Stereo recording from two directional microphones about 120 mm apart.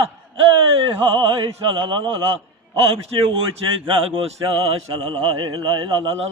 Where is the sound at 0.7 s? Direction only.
50° right (ahead or behind).